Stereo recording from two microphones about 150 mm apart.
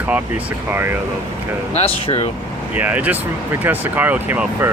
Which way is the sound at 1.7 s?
40° left (ahead or behind).